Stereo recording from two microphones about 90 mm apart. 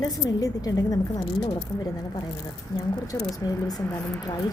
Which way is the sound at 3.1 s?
40° left (ahead or behind).